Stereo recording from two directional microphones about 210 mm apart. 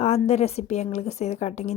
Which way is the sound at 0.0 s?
30° left (ahead or behind).